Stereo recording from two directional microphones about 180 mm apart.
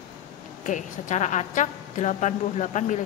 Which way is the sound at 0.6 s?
45° left (ahead or behind).